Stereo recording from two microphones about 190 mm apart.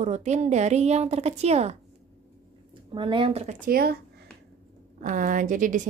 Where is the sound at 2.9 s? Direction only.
25° right (ahead or behind).